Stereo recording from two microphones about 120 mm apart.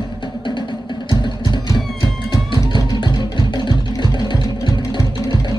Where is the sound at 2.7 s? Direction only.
40° left (ahead or behind).